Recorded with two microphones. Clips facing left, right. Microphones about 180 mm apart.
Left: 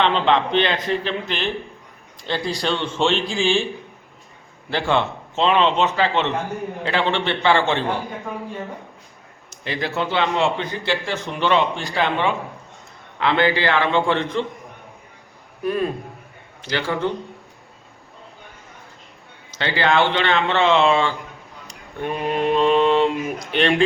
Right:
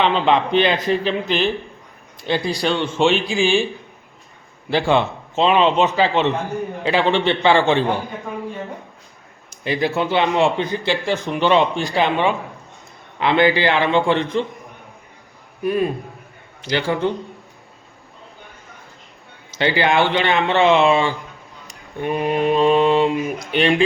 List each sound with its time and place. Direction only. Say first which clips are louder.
0.0 s a man's voice: right 1 dB; 10° right (ahead or behind)
4.7 s a man's voice: right 3 dB; 10° right (ahead or behind)
9.6 s a man's voice: right 4 dB; 10° right (ahead or behind)
15.6 s a man's voice: right 3 dB; 10° right (ahead or behind)
19.5 s a man's voice: right 2 dB; 15° right (ahead or behind)